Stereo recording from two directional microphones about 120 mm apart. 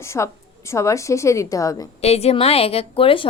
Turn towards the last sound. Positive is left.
turn(degrees=50)  # may be behind; listen again after turning